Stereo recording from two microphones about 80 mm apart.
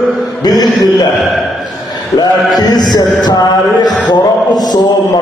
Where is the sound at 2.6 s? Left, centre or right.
Left.